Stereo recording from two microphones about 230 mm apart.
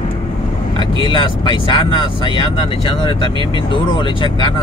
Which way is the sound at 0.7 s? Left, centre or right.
Left.